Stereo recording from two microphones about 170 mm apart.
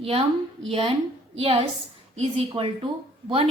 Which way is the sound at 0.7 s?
35° right (ahead or behind).